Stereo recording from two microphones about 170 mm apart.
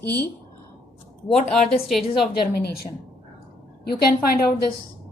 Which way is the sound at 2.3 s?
65° left (ahead or behind).